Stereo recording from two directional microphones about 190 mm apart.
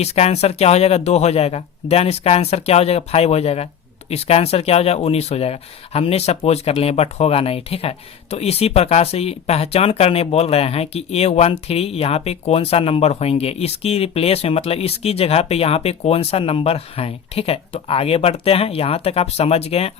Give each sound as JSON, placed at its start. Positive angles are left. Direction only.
{"t": 0.0, "sound": "speech", "side_deg": 35}